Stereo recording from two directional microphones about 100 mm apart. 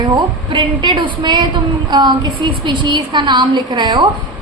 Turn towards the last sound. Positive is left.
turn(degrees=-50)  # may be behind; listen again after turning